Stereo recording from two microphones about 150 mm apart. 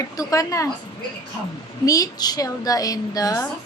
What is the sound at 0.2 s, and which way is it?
Speech, 20° left (ahead or behind).